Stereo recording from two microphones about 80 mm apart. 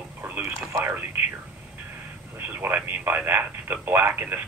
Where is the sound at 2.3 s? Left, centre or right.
Right.